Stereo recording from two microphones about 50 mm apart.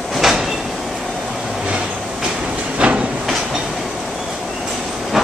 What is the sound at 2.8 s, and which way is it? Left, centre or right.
Train, right.